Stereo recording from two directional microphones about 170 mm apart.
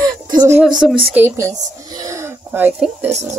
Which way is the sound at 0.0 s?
20° right (ahead or behind).